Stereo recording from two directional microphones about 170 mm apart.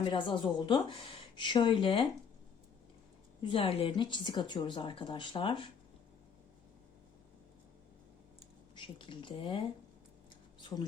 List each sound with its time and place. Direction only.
0.0 s a woman's voice: 30° left (ahead or behind)
3.4 s a woman's voice: 30° left (ahead or behind)
8.7 s speech: 30° left (ahead or behind)